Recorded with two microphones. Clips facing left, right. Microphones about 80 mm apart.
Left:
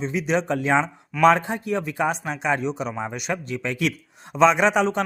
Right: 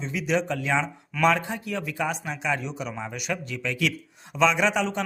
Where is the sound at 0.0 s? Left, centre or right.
Left.